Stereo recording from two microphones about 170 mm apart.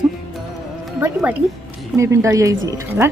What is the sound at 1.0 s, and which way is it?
Speech, 10° right (ahead or behind).